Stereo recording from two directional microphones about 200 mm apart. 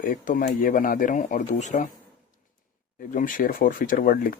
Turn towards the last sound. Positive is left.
turn(degrees=45)  # may be behind; listen again after turning